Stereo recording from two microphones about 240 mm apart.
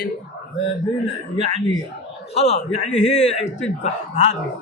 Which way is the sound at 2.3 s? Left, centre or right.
Left.